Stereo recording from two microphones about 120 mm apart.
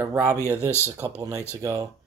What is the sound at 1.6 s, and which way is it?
Speech, 25° right (ahead or behind).